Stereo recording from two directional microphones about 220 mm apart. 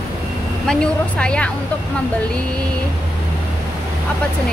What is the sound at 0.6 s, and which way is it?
Speech, 5° left (ahead or behind).